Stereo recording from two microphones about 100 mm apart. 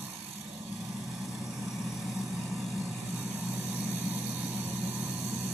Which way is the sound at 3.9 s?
20° right (ahead or behind).